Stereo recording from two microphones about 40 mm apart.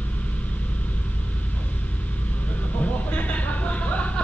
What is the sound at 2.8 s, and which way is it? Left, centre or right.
Vehicle, left.